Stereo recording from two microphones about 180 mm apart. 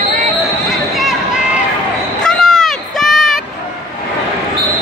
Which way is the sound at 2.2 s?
5° left (ahead or behind).